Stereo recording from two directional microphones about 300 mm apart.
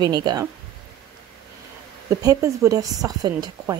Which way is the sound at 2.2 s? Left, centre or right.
Centre.